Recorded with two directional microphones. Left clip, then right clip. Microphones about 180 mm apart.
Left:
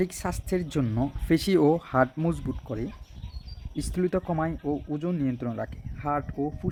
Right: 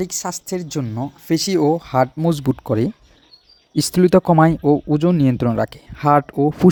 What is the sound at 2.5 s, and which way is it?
Speech, 60° right (ahead or behind).